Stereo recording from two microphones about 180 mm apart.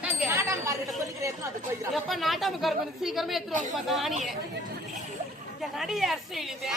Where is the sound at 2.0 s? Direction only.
Centre (ahead or behind).